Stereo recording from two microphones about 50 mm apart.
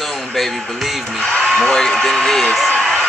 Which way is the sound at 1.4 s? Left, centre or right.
Centre.